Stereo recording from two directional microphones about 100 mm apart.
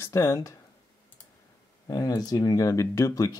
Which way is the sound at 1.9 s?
40° left (ahead or behind).